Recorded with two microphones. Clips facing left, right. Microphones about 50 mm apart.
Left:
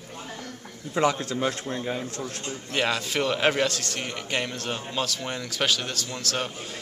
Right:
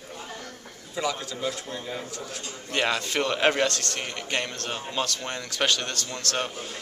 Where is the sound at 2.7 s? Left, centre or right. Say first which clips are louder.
Even; centre.